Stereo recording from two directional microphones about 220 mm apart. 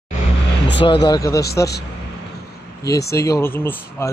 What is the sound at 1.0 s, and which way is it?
Speech, 15° left (ahead or behind).